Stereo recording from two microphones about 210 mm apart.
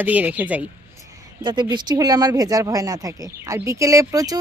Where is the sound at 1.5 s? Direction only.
20° right (ahead or behind).